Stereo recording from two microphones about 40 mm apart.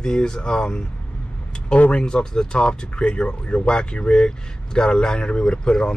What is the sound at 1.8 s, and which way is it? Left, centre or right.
Speech, left.